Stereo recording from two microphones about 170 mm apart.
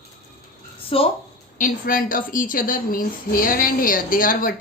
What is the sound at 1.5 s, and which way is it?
A woman's voice, 50° left (ahead or behind).